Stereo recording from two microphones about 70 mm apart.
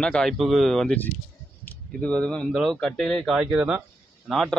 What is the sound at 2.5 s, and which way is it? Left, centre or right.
Speech, centre.